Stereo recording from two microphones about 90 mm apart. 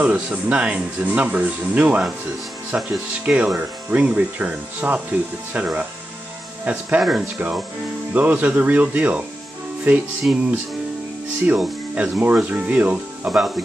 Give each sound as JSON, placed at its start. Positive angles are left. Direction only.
{"t": 0.0, "sound": "speech", "side_deg": -15}
{"t": 7.0, "sound": "speech", "side_deg": -5}
{"t": 8.1, "sound": "speech", "side_deg": -20}
{"t": 10.3, "sound": "speech", "side_deg": -10}
{"t": 11.4, "sound": "speech", "side_deg": -15}